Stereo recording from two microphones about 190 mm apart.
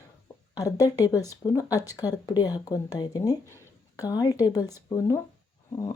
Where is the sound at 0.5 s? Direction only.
20° left (ahead or behind).